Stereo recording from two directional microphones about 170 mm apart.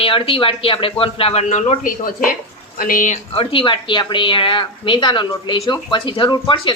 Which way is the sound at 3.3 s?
30° left (ahead or behind).